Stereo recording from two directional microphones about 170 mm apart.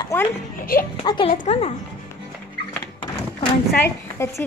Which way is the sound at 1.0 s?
30° left (ahead or behind).